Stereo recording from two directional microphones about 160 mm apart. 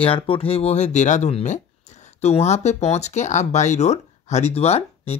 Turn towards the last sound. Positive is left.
turn(degrees=40)  # may be behind; listen again after turning